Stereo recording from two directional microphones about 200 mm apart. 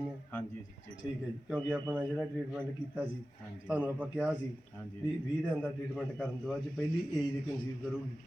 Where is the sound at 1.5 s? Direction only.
10° right (ahead or behind).